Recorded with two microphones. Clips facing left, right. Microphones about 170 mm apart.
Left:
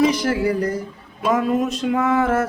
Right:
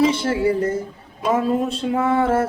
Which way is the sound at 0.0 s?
25° right (ahead or behind).